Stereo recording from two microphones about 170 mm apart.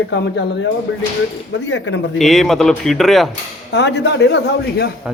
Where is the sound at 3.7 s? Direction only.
90° left.